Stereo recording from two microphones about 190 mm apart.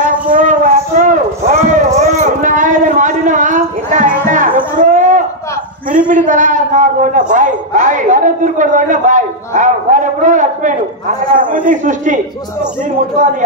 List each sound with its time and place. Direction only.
0.0 s music: 45° right (ahead or behind)
1.5 s a sound: 40° right (ahead or behind)
6.0 s a man's voice: 40° right (ahead or behind)
13.2 s a man's voice: 40° right (ahead or behind)